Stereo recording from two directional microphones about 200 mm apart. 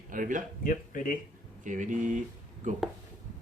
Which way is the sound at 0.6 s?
45° left (ahead or behind).